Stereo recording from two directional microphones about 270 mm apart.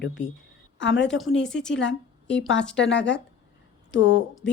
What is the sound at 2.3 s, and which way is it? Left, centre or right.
A woman's voice, left.